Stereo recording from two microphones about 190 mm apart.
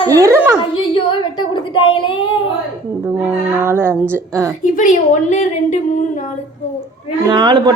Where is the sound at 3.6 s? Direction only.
10° right (ahead or behind).